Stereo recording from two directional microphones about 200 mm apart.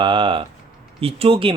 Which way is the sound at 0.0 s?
25° right (ahead or behind).